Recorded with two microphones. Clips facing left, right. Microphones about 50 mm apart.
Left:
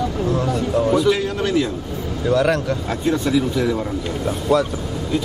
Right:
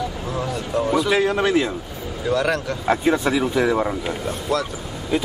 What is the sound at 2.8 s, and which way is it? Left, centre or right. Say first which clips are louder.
Speech: right 6 dB; centre.